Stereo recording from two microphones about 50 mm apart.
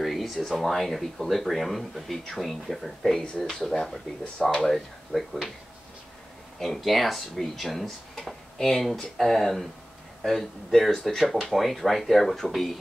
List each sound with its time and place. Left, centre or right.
0.0 s speech: centre
6.6 s speech: centre